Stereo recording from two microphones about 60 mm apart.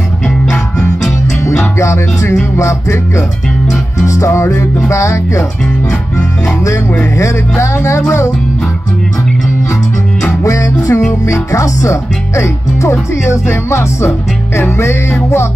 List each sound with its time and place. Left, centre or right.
1.8 s music: left
4.0 s music: left
6.1 s music: left
7.2 s music: left
10.4 s music: left
13.2 s music: left